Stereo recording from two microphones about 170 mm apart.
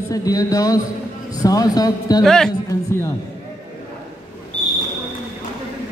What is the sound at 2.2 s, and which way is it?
Speech, 5° left (ahead or behind).